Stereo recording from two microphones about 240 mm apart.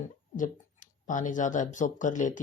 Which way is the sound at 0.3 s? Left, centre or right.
Left.